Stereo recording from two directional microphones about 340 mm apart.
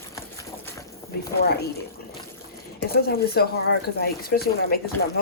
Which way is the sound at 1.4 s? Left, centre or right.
Left.